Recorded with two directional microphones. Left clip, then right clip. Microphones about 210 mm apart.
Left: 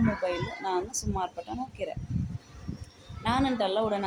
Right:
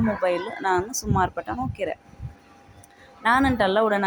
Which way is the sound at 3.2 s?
20° right (ahead or behind).